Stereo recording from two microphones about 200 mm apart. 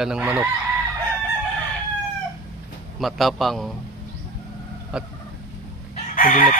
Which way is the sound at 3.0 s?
Centre (ahead or behind).